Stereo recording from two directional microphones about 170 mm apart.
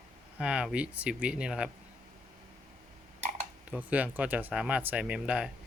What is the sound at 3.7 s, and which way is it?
Speech, 10° right (ahead or behind).